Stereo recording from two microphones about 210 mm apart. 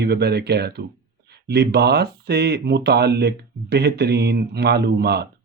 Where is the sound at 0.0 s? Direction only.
50° right (ahead or behind).